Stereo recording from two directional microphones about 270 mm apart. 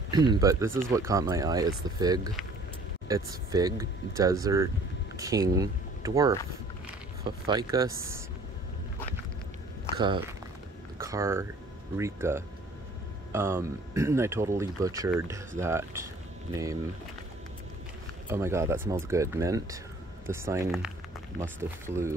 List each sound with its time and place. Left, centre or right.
0.1 s speech: centre
7.4 s speech: centre
9.9 s speech: centre
18.3 s speech: centre